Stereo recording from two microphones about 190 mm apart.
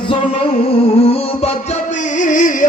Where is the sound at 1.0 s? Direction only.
30° left (ahead or behind).